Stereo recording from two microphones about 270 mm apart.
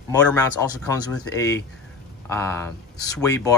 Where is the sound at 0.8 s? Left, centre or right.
Centre.